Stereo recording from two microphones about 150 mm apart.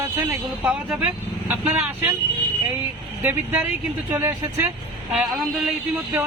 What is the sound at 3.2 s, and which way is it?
Speech, 10° right (ahead or behind).